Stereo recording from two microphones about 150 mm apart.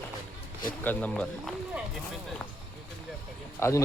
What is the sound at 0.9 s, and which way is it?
Speech, 10° left (ahead or behind).